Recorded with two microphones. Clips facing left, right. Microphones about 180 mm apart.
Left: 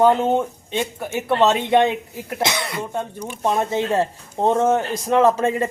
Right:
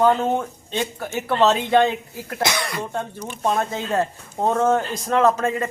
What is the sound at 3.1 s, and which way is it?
Speech, 10° left (ahead or behind).